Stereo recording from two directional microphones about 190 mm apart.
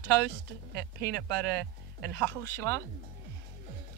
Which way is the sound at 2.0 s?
10° left (ahead or behind).